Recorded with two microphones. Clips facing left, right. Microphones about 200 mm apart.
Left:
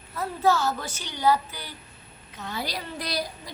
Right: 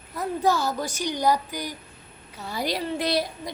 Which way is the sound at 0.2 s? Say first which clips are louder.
Even; 15° right (ahead or behind).